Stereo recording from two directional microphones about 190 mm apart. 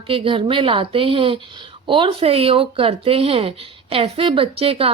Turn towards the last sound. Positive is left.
turn(degrees=-30)  # may be behind; listen again after turning